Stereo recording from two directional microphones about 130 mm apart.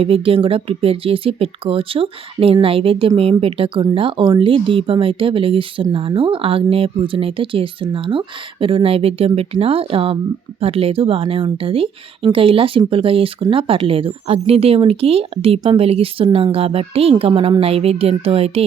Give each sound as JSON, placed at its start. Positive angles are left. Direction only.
{"t": 0.0, "sound": "speech", "side_deg": -45}